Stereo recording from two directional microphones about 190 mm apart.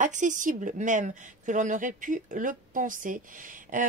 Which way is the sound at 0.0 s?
40° right (ahead or behind).